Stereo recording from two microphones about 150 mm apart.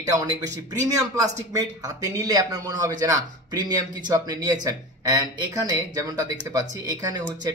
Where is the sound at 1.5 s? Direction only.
25° right (ahead or behind).